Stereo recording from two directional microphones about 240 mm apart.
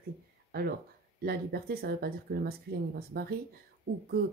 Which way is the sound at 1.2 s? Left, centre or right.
Right.